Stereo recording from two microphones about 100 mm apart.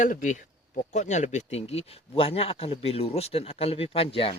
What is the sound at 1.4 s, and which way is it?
Speech, 90° left.